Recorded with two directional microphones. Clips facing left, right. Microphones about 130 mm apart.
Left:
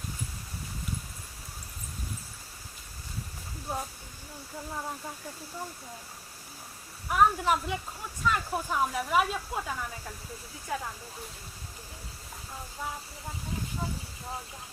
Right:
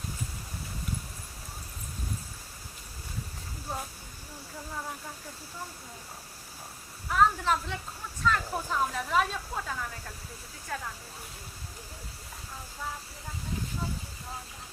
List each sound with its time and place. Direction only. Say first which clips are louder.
3.7 s speech: left 2 dB; 10° left (ahead or behind)
7.1 s speech: left 1 dB; 15° left (ahead or behind)